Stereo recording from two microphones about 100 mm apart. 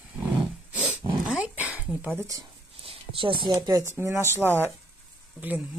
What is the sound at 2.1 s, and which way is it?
Speech, 35° right (ahead or behind).